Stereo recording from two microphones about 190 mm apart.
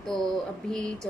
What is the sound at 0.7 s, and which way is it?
Speech, 5° left (ahead or behind).